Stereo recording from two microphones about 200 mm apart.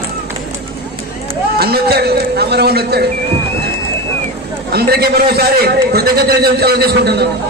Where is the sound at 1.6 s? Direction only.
50° right (ahead or behind).